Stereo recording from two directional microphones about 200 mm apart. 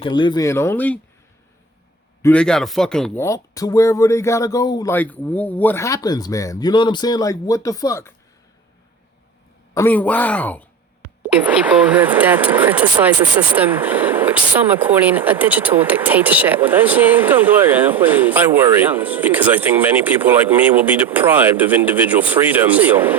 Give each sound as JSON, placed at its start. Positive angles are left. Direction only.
{"t": 0.0, "sound": "speech", "side_deg": 25}
{"t": 2.2, "sound": "speech", "side_deg": 5}
{"t": 3.2, "sound": "speech", "side_deg": 15}
{"t": 4.9, "sound": "speech", "side_deg": 10}
{"t": 9.7, "sound": "speech", "side_deg": 10}
{"t": 11.9, "sound": "speech", "side_deg": -10}